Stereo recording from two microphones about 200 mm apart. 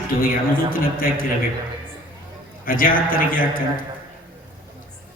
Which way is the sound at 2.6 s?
45° left (ahead or behind).